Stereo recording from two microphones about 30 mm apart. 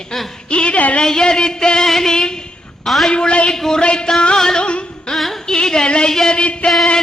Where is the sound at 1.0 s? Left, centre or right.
Left.